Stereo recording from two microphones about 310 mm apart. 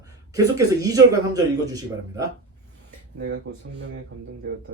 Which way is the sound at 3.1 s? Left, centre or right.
Right.